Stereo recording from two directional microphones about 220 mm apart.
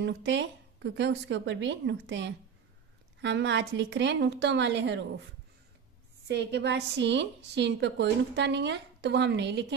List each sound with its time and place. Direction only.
0.0 s speech: 55° right (ahead or behind)
6.2 s a woman's voice: 50° right (ahead or behind)